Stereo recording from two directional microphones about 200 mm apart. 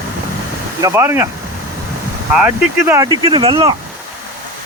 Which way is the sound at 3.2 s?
25° right (ahead or behind).